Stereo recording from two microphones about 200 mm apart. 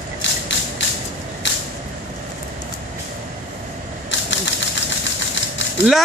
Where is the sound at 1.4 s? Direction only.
65° left (ahead or behind).